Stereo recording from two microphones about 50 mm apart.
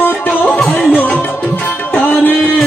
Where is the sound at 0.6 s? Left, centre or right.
Centre.